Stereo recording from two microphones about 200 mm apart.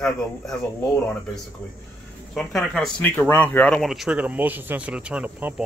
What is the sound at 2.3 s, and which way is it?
Speech, centre (ahead or behind).